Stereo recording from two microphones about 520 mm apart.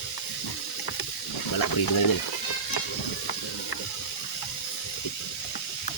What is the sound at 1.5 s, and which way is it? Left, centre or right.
Speech, left.